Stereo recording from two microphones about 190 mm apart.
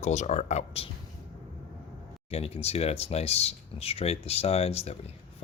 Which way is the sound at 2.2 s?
30° left (ahead or behind).